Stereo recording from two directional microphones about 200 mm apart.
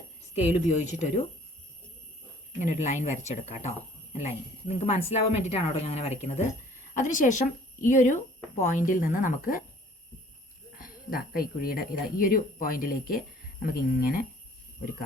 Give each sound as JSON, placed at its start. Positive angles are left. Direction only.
{"t": 0.4, "sound": "speech", "side_deg": 35}
{"t": 2.6, "sound": "speech", "side_deg": 35}
{"t": 10.8, "sound": "speech", "side_deg": 45}